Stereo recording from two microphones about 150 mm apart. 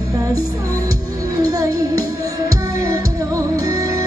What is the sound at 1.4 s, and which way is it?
Music, 25° right (ahead or behind).